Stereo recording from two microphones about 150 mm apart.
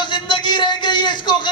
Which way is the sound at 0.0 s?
30° left (ahead or behind).